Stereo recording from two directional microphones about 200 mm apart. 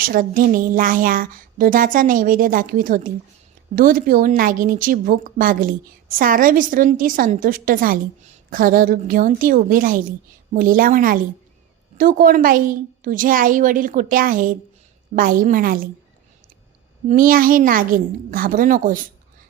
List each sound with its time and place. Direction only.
0.0 s a woman's voice: 45° right (ahead or behind)
17.1 s a woman's voice: 45° right (ahead or behind)